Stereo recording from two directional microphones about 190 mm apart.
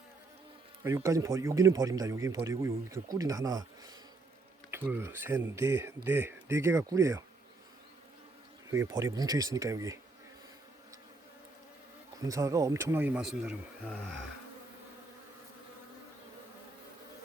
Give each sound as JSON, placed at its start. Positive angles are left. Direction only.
{"t": 0.9, "sound": "speech", "side_deg": -15}
{"t": 8.7, "sound": "speech", "side_deg": -15}
{"t": 12.2, "sound": "speech", "side_deg": -15}